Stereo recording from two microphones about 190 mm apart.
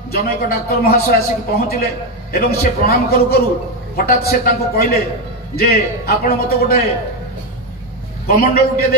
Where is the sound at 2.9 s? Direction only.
55° left (ahead or behind).